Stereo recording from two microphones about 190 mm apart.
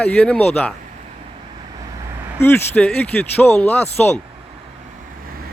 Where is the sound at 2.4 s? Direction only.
10° left (ahead or behind).